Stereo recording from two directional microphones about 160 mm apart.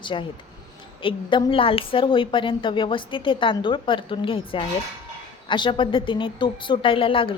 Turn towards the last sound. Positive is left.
turn(degrees=35)  # may be behind; listen again after turning